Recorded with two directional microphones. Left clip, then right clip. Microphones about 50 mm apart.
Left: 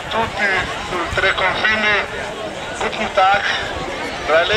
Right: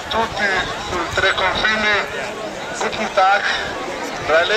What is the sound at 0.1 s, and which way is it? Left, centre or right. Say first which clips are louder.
Speech: left 1 dB; centre.